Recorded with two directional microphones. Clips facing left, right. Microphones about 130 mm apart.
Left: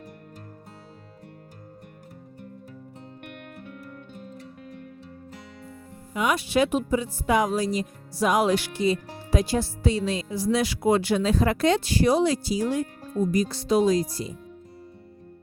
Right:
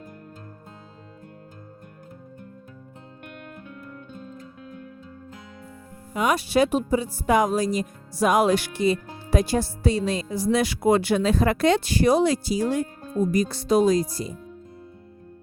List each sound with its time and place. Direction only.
6.1 s speech: 40° right (ahead or behind)